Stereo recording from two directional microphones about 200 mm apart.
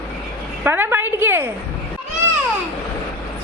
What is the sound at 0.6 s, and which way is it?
Speech, 10° right (ahead or behind).